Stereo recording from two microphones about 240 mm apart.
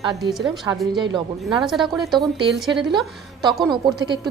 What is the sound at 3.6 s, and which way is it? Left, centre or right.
Speech, centre.